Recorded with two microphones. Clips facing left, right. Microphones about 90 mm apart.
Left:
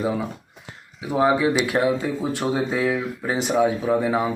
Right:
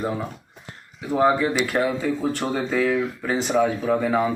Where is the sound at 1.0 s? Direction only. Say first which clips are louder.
Even; 5° left (ahead or behind).